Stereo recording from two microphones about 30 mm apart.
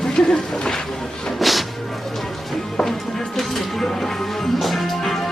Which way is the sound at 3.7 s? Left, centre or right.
Centre.